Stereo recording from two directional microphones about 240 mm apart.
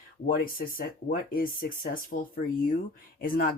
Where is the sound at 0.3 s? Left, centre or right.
Left.